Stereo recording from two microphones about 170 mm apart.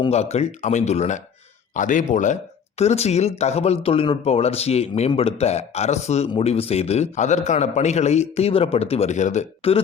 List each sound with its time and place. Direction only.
0.1 s speech: 40° left (ahead or behind)